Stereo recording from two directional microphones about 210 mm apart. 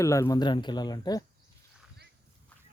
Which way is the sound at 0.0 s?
15° left (ahead or behind).